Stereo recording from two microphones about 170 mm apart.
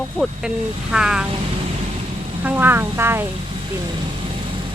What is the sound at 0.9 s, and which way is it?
Speech, 5° right (ahead or behind).